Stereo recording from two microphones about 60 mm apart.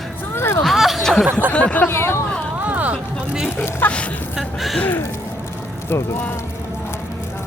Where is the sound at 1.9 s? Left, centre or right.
Left.